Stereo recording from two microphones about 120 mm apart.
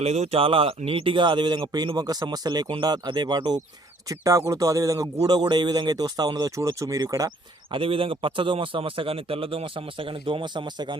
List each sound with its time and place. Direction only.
0.0 s a man's voice: 60° right (ahead or behind); by 7.3 s 30° right (ahead or behind)
7.7 s a man's voice: 50° right (ahead or behind)